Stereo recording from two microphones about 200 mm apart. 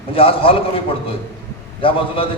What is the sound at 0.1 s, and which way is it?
Speech, 25° left (ahead or behind).